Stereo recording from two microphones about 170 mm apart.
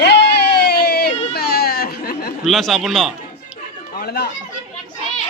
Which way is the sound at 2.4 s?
Centre (ahead or behind).